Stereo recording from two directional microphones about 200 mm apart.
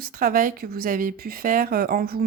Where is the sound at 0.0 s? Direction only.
45° right (ahead or behind).